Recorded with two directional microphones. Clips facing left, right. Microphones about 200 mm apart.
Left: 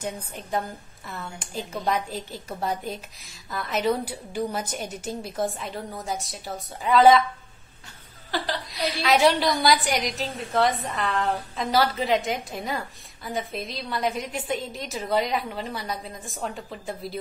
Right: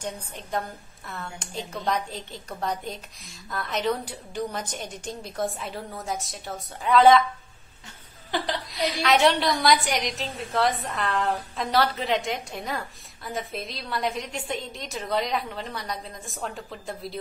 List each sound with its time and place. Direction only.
0.0 s a woman's voice: centre (ahead or behind)
8.3 s a woman's voice: 20° right (ahead or behind)
9.0 s a woman's voice: centre (ahead or behind)